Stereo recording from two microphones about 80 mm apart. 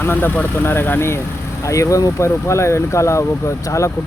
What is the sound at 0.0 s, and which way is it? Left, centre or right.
Speech, left.